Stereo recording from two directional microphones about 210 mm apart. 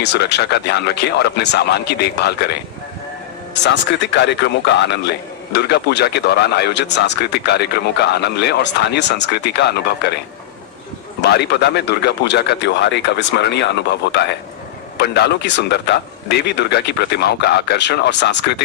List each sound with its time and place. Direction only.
0.0 s speech: 55° left (ahead or behind)
11.2 s speech: 50° left (ahead or behind)